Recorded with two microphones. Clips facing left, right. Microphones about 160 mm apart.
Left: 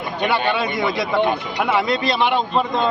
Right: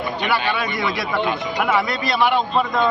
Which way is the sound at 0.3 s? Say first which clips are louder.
Left 3 dB; 25° left (ahead or behind).